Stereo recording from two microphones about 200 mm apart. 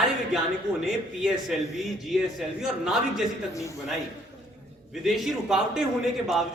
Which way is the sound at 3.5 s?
15° left (ahead or behind).